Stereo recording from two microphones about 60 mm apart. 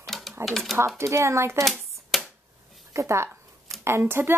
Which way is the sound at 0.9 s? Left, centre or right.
Right.